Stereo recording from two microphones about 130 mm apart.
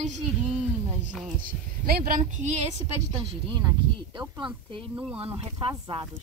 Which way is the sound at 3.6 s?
30° right (ahead or behind).